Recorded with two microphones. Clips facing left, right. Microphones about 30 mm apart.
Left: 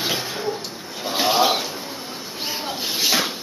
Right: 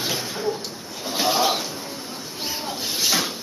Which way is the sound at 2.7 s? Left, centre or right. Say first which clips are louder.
Left 2 dB; centre.